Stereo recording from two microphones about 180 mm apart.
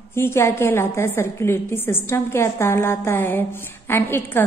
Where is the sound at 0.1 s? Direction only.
15° left (ahead or behind).